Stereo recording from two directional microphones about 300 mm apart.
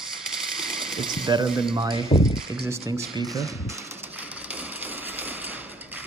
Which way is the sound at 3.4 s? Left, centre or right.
Centre.